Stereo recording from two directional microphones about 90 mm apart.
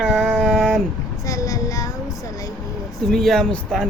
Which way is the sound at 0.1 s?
5° left (ahead or behind).